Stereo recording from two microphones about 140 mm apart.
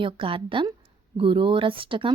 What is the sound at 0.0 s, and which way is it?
Speech, 40° right (ahead or behind).